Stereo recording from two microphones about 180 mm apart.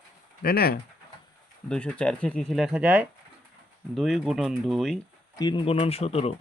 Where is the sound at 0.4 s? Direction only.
60° left (ahead or behind).